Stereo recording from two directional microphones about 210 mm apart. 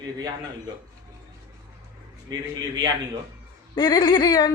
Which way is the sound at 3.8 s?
20° left (ahead or behind).